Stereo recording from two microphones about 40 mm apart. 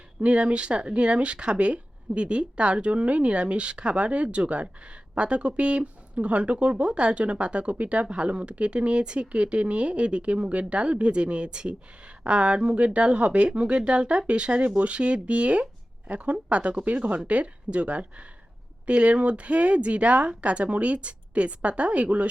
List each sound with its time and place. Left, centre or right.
0.2 s speech: right